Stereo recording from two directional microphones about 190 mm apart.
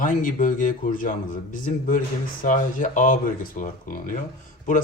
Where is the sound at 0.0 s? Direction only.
45° left (ahead or behind).